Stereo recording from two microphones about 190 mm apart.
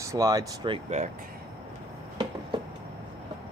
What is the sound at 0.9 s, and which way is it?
Speech, 35° right (ahead or behind).